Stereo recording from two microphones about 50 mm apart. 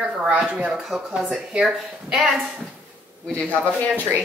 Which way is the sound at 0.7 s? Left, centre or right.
Centre.